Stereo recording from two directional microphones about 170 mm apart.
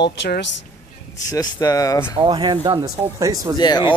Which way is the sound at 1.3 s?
20° left (ahead or behind).